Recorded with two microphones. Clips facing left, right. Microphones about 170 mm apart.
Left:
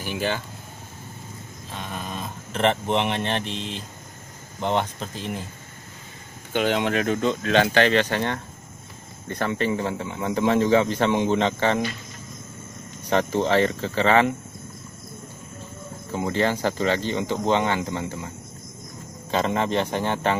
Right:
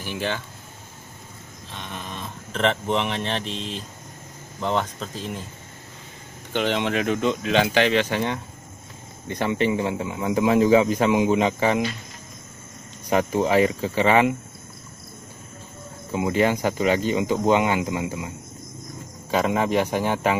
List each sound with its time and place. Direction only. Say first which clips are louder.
0.0 s speech: left 1 dB; 5° left (ahead or behind)
1.7 s a sound: left 2 dB; 5° left (ahead or behind)
2.5 s speech: left 1 dB; 5° left (ahead or behind)
4.6 s speech: left 1 dB; 30° left (ahead or behind)
5.1 s speech: left 1 dB; centre (ahead or behind)
6.5 s speech: left 1 dB; 5° left (ahead or behind)
13.1 s speech: right 1 dB; 10° right (ahead or behind)
16.1 s speech: right 2 dB; 10° right (ahead or behind)
19.3 s speech: right 2 dB; 10° right (ahead or behind)